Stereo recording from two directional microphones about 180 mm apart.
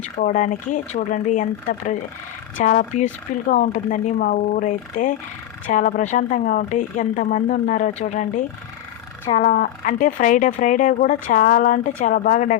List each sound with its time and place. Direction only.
0.0 s speech: 40° left (ahead or behind)